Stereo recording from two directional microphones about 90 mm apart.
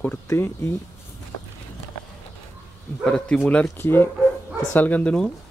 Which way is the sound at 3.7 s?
25° left (ahead or behind).